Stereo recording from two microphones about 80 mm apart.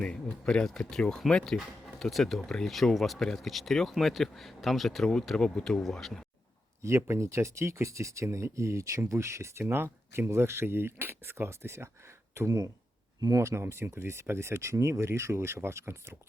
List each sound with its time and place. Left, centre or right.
0.0 s speech: centre
6.8 s speech: right
13.4 s speech: right